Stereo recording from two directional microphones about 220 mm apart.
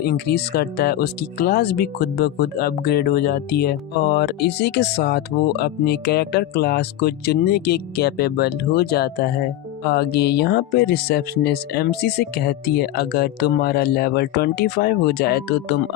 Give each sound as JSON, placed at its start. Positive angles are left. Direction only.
{"t": 0.0, "sound": "speech", "side_deg": 45}